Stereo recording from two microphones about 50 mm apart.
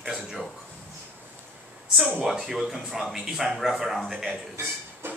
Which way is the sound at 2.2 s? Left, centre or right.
Centre.